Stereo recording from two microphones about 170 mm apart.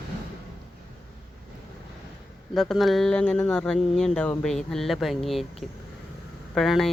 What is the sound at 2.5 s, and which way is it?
Speech, centre (ahead or behind).